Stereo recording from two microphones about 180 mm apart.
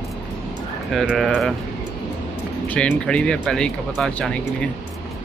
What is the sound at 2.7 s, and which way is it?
Speech, 5° left (ahead or behind).